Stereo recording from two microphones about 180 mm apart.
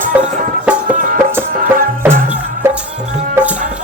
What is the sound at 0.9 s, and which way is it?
Music, 45° right (ahead or behind).